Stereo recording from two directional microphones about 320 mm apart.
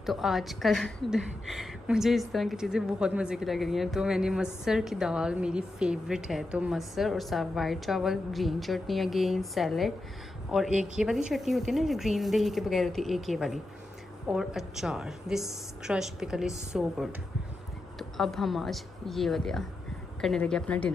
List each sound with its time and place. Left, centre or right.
0.0 s a woman's voice: centre